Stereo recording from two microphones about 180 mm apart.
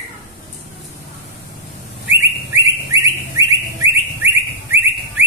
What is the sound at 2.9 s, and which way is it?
Bird, 15° right (ahead or behind).